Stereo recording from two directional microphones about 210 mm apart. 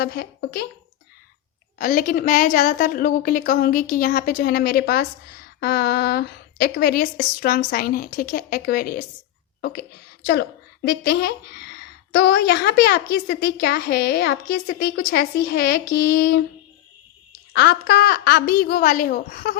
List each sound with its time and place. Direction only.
0.0 s a woman's voice: 50° left (ahead or behind)
1.8 s a woman's voice: 40° left (ahead or behind)
10.8 s a woman's voice: 50° left (ahead or behind)
17.5 s a woman's voice: 50° left (ahead or behind)